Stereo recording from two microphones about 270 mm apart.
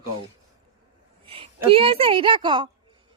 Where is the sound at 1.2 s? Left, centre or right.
Centre.